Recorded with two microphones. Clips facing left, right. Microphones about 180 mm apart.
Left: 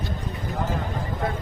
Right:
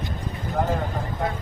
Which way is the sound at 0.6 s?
60° right (ahead or behind).